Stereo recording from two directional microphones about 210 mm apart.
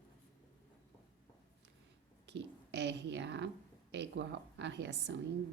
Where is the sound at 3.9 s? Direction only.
55° right (ahead or behind).